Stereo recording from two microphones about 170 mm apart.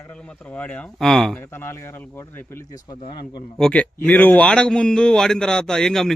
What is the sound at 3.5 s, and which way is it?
Speech, 5° left (ahead or behind).